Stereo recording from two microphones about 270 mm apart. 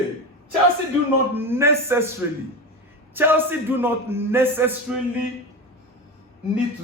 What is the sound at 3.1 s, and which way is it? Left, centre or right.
A man's voice, centre.